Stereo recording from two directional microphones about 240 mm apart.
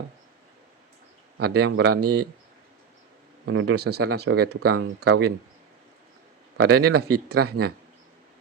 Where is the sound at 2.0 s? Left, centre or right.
Right.